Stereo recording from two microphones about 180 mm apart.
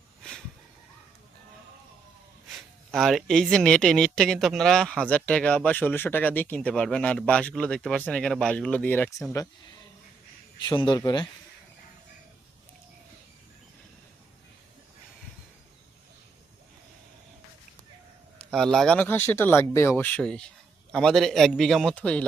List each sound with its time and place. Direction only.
0.2 s a sound: 5° left (ahead or behind)
2.9 s speech: centre (ahead or behind)
10.6 s speech: 25° left (ahead or behind)
18.5 s speech: centre (ahead or behind)